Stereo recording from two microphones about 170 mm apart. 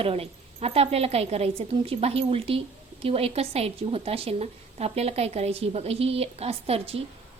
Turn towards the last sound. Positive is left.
turn(degrees=-35)  # may be behind; listen again after turning